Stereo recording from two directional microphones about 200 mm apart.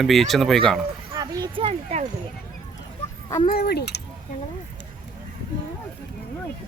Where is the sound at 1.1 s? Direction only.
20° right (ahead or behind).